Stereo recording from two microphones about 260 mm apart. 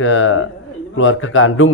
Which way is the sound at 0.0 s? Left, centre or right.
Left.